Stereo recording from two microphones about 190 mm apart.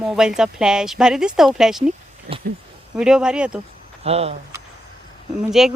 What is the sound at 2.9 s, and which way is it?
Speech, 5° right (ahead or behind).